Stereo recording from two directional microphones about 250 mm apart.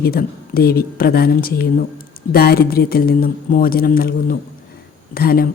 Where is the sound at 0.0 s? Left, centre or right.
Left.